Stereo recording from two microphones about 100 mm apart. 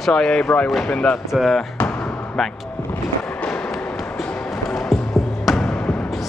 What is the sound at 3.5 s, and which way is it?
Music, 5° left (ahead or behind).